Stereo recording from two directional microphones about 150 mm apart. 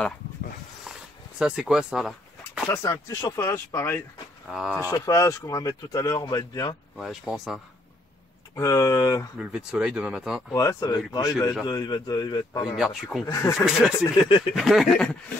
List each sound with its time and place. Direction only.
0.9 s a sound: centre (ahead or behind)
1.4 s speech: 5° right (ahead or behind)
2.7 s speech: 20° left (ahead or behind)
4.5 s speech: centre (ahead or behind)
4.9 s speech: 20° left (ahead or behind)
7.0 s speech: centre (ahead or behind)
8.5 s speech: 20° left (ahead or behind)
9.4 s speech: 5° right (ahead or behind)
10.5 s speech: 20° left (ahead or behind)
12.7 s speech: centre (ahead or behind)
13.2 s speech: 20° left (ahead or behind)
13.7 s speech: 5° right (ahead or behind)